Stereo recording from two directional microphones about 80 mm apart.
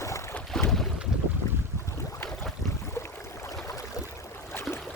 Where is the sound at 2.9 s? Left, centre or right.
Left.